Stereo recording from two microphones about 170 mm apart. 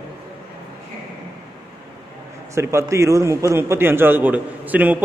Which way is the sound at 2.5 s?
15° right (ahead or behind).